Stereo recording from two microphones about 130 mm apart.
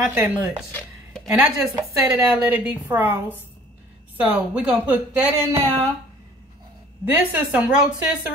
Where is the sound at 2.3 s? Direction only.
15° right (ahead or behind).